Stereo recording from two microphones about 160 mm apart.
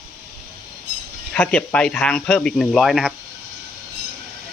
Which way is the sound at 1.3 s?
5° left (ahead or behind).